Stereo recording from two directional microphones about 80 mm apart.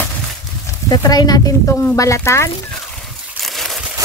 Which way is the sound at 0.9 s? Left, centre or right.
Left.